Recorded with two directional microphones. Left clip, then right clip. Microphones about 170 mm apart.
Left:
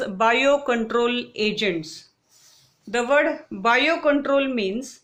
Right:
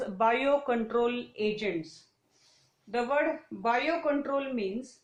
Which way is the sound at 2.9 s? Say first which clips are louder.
Left 8 dB; 35° left (ahead or behind).